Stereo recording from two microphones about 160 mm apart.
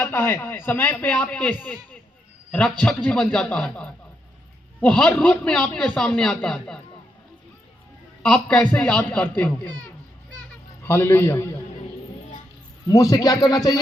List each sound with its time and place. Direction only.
0.0 s a man's voice: 15° left (ahead or behind)
8.2 s speech: 5° left (ahead or behind)
10.8 s speech: 15° left (ahead or behind)
12.9 s speech: 20° left (ahead or behind)